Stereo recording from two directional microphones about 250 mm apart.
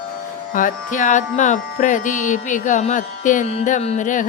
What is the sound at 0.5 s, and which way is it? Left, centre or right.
Speech, left.